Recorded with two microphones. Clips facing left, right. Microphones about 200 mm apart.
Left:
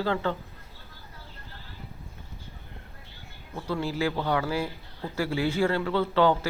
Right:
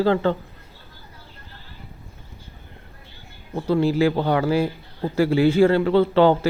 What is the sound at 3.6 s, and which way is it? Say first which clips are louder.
Speech: right 10 dB; 30° right (ahead or behind).